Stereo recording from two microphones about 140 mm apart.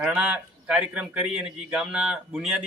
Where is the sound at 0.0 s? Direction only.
10° right (ahead or behind).